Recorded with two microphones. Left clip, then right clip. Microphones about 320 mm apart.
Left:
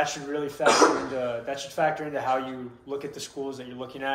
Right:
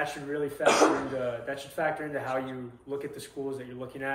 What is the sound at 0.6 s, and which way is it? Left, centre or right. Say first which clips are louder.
Speech: left 3 dB; centre.